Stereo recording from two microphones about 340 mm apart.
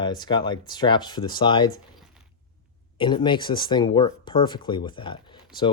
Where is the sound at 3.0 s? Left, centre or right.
Centre.